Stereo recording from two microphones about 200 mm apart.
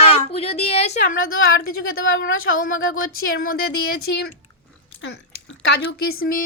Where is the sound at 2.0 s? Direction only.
80° left.